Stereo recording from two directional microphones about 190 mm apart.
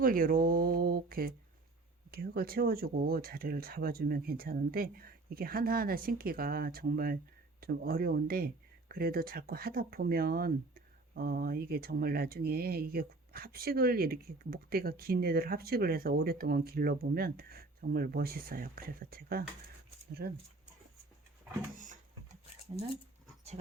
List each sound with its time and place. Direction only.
0.0 s speech: 50° right (ahead or behind)